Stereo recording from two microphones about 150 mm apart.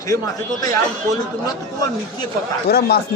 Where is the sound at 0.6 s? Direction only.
25° left (ahead or behind).